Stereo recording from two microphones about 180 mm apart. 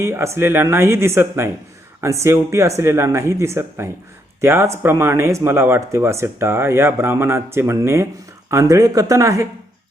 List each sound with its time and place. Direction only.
0.0 s speech: 15° right (ahead or behind)